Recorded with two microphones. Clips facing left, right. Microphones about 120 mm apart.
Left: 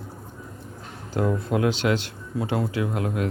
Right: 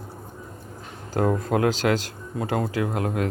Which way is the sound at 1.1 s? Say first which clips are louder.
Right 2 dB; 45° right (ahead or behind).